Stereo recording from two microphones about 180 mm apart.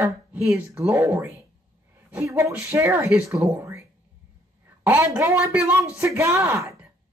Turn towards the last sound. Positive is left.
turn(degrees=-15)  # may be behind; listen again after turning